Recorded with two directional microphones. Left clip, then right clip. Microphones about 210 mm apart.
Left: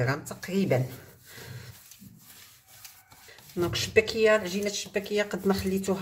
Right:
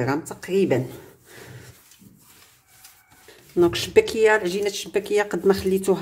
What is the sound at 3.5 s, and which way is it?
Speech, 25° right (ahead or behind).